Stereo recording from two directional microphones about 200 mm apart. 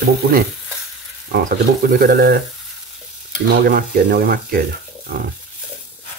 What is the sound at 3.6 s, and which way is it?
Speech, 50° right (ahead or behind).